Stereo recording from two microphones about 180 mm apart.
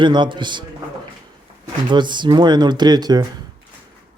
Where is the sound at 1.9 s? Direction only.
25° right (ahead or behind).